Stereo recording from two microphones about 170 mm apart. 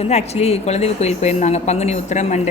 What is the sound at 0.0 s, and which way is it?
A woman's voice, 40° left (ahead or behind).